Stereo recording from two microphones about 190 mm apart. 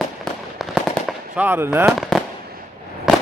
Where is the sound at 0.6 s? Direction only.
Centre (ahead or behind).